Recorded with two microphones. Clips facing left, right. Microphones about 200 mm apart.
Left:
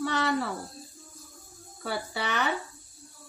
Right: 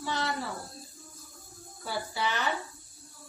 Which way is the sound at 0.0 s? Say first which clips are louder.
Left 5 dB; 60° left (ahead or behind).